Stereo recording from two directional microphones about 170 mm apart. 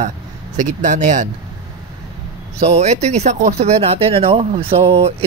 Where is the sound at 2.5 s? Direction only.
40° right (ahead or behind).